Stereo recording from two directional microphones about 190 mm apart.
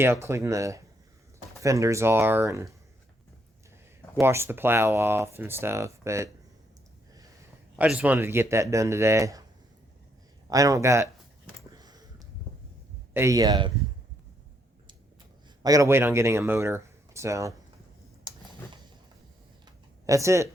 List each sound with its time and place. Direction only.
0.0 s speech: 15° right (ahead or behind)
4.2 s speech: 15° right (ahead or behind)
7.8 s speech: 5° right (ahead or behind)
10.5 s speech: 15° right (ahead or behind)
11.7 s a sound: 20° right (ahead or behind)
13.1 s speech: 15° right (ahead or behind)
15.6 s speech: 15° right (ahead or behind)
18.3 s a sound: 25° right (ahead or behind)
20.1 s speech: 15° right (ahead or behind)